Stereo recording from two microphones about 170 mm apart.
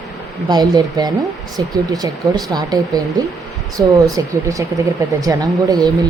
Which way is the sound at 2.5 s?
20° right (ahead or behind).